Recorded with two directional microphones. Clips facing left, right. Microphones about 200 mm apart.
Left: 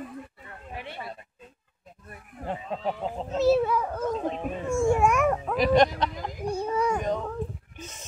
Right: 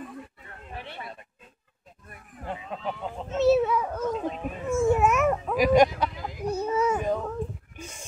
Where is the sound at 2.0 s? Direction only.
35° left (ahead or behind).